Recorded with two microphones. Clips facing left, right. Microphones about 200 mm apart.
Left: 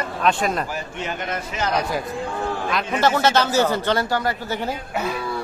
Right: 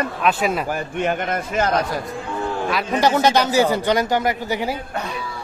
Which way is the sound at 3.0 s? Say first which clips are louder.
Right 2 dB; 15° right (ahead or behind).